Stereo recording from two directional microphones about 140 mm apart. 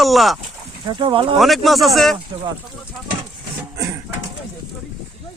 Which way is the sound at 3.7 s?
20° right (ahead or behind).